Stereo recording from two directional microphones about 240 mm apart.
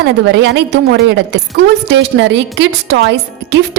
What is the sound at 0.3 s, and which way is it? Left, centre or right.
A woman's voice, right.